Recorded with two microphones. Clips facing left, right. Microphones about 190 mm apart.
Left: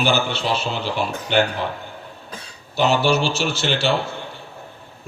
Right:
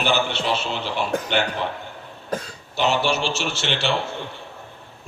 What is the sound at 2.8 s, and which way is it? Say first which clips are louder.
Speech: left 3 dB; 40° left (ahead or behind).